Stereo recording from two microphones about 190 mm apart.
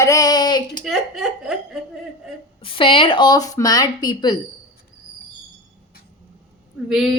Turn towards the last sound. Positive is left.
turn(degrees=0)  # may be behind; listen again after turning